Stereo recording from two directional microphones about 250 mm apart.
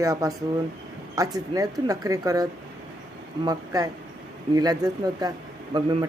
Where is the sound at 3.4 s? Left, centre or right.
Centre.